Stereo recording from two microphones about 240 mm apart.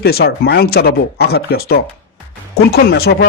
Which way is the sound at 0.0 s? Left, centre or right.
Left.